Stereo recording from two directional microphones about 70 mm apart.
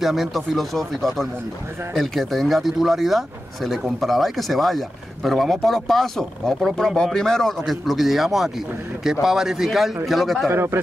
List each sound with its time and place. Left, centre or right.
0.0 s speech: centre
10.5 s speech: right